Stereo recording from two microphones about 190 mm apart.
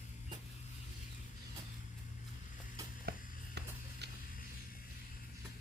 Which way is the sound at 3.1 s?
55° right (ahead or behind).